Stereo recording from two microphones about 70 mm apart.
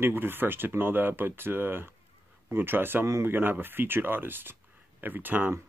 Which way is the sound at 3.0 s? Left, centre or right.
Right.